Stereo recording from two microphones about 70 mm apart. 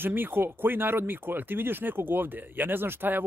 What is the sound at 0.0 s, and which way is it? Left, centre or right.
Speech, right.